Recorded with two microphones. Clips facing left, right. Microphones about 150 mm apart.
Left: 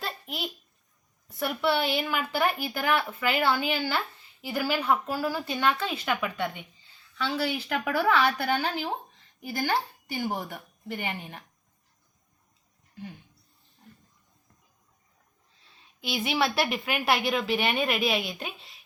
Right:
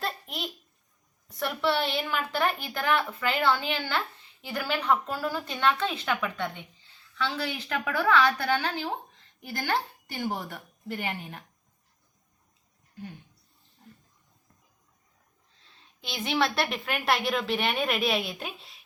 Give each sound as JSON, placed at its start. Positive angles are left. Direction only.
{"t": 0.0, "sound": "babbling", "side_deg": 5}
{"t": 1.3, "sound": "a woman's voice", "side_deg": 5}
{"t": 16.0, "sound": "a woman's voice", "side_deg": 5}